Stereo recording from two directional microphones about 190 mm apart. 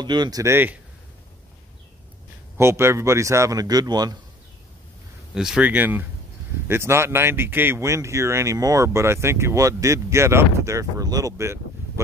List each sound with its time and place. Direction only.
0.0 s speech: 25° right (ahead or behind)
2.5 s speech: 15° right (ahead or behind)
5.3 s speech: 5° right (ahead or behind)